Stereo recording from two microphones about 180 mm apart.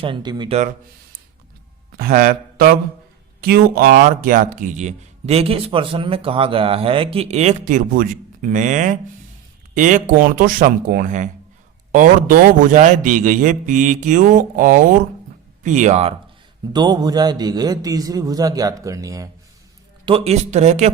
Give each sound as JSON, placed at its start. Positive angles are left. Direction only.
{"t": 0.0, "sound": "a man's voice", "side_deg": -25}
{"t": 2.0, "sound": "a sound", "side_deg": -55}
{"t": 3.4, "sound": "a man's voice", "side_deg": -55}
{"t": 16.7, "sound": "a man's voice", "side_deg": -20}
{"t": 20.1, "sound": "speech", "side_deg": -35}